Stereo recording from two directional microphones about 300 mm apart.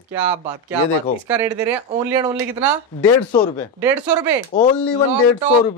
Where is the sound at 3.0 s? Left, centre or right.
Centre.